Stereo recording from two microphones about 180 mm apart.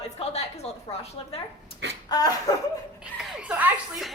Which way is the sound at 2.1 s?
20° left (ahead or behind).